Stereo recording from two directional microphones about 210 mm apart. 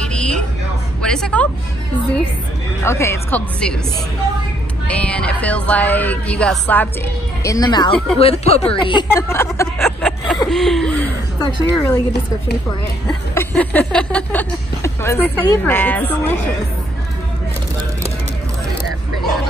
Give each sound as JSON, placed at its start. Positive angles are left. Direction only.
{"t": 0.0, "sound": "vehicle", "side_deg": 5}
{"t": 1.0, "sound": "speech", "side_deg": 5}
{"t": 2.8, "sound": "a woman's voice", "side_deg": 10}
{"t": 4.8, "sound": "a woman's voice", "side_deg": 5}
{"t": 7.4, "sound": "speech", "side_deg": 15}
{"t": 9.8, "sound": "speech", "side_deg": 0}
{"t": 11.3, "sound": "a woman's voice", "side_deg": 15}
{"t": 13.0, "sound": "a woman's voice", "side_deg": 10}